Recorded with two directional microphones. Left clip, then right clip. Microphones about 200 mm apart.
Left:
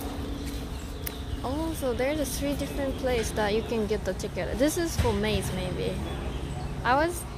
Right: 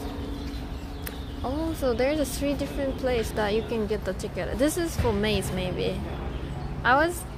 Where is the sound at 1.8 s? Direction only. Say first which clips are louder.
Right 4 dB; 25° right (ahead or behind).